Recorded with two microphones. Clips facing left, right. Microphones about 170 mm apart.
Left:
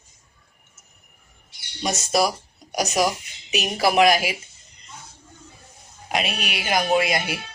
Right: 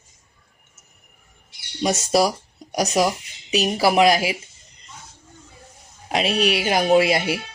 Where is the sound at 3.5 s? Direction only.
35° right (ahead or behind).